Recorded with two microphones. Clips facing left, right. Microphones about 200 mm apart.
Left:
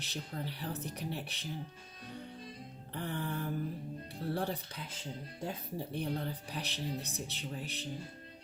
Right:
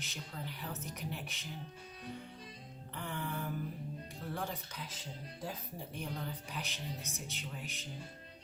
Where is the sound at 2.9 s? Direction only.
35° left (ahead or behind).